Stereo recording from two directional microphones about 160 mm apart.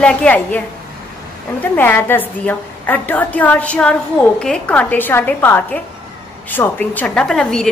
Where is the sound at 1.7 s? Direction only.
10° left (ahead or behind).